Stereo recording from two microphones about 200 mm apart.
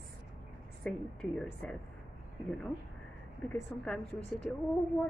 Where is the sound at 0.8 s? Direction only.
5° left (ahead or behind).